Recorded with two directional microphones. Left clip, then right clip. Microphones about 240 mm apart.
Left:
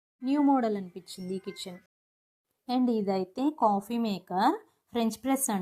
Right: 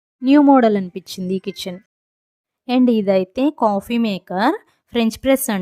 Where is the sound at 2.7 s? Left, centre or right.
Right.